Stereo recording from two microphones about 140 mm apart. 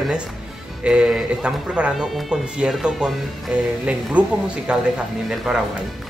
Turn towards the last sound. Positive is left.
turn(degrees=-5)  # may be behind; listen again after turning